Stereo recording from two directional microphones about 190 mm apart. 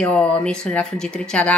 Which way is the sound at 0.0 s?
5° left (ahead or behind).